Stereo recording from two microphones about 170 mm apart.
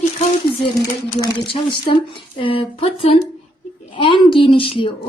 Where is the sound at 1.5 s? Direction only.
30° left (ahead or behind).